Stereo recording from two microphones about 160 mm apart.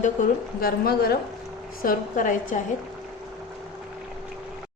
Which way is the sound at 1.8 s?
60° left (ahead or behind).